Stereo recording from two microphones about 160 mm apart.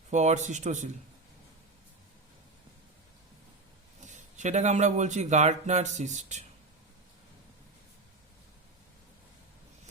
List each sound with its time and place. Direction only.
0.1 s speech: 45° right (ahead or behind)
4.0 s speech: 50° right (ahead or behind)